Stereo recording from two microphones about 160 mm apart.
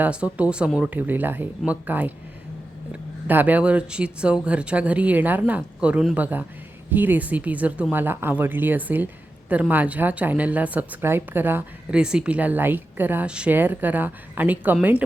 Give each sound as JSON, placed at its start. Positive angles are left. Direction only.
{"t": 0.0, "sound": "a woman's voice", "side_deg": -10}